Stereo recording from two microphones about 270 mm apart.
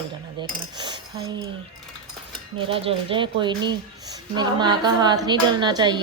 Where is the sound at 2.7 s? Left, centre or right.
Centre.